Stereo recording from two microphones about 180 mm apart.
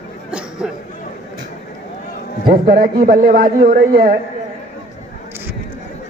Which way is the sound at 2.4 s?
55° right (ahead or behind).